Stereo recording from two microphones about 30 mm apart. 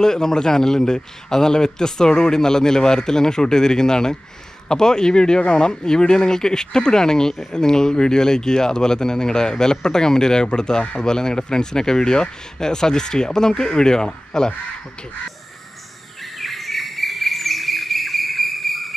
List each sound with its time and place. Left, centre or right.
0.0 s speech: centre
16.2 s chirp: centre